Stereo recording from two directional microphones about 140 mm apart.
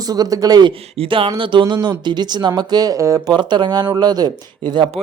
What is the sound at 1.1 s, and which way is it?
Speech, 40° right (ahead or behind).